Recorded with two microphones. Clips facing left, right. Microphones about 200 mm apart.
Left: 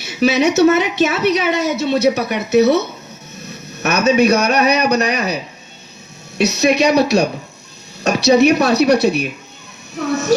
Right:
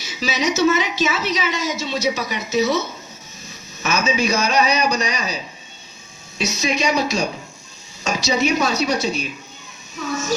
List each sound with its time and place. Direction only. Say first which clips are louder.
0.0 s a woman's voice: left 8 dB; 60° left (ahead or behind)